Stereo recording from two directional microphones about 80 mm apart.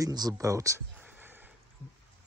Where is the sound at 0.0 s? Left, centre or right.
Right.